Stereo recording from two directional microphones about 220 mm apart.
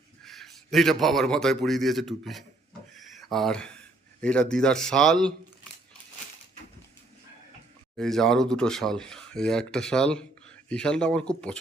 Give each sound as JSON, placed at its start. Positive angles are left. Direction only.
{"t": 0.3, "sound": "a man's voice", "side_deg": 0}
{"t": 2.9, "sound": "a sound", "side_deg": 0}
{"t": 4.2, "sound": "speech", "side_deg": 5}
{"t": 7.9, "sound": "speech", "side_deg": 0}